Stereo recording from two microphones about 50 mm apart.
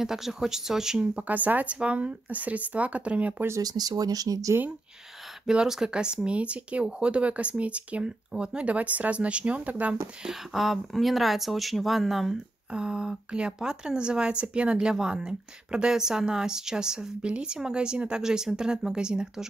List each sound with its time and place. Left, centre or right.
0.0 s speech: centre
1.1 s speech: right
5.5 s speech: centre; by 9.9 s right
10.2 s speech: centre
12.7 s speech: centre